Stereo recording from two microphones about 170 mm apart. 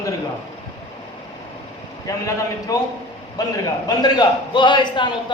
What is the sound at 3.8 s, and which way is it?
Speech, 25° left (ahead or behind).